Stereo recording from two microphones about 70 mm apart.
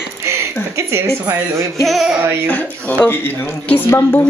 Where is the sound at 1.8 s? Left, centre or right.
Centre.